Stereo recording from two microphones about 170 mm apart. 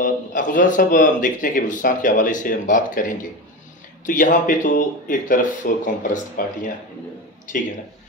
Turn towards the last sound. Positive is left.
turn(degrees=55)  # may be behind; listen again after turning